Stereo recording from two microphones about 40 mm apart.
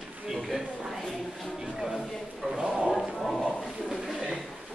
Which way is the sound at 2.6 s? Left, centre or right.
Centre.